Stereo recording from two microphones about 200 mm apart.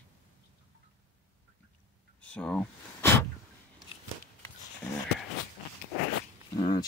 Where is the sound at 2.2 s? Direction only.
5° left (ahead or behind).